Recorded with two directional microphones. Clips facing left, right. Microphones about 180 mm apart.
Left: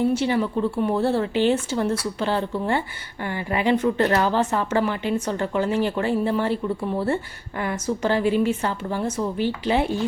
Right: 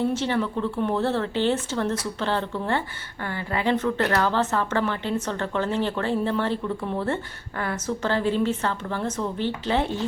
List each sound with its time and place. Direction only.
0.0 s speech: 10° left (ahead or behind)